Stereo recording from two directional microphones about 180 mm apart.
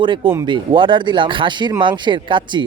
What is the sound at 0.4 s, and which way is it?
Speech, 25° right (ahead or behind).